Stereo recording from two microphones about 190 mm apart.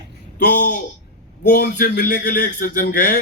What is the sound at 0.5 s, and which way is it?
A man's voice, 45° left (ahead or behind).